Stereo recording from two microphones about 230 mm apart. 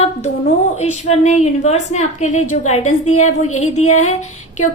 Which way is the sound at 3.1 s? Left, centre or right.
Left.